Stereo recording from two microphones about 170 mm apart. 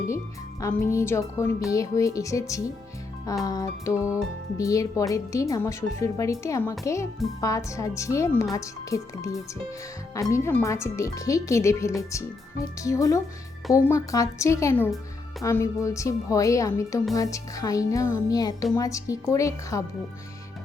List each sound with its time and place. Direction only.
0.6 s speech: 20° left (ahead or behind)